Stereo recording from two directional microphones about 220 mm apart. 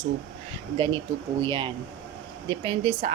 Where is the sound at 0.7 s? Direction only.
20° right (ahead or behind).